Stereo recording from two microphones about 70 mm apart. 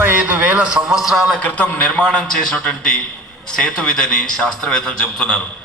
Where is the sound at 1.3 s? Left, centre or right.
Left.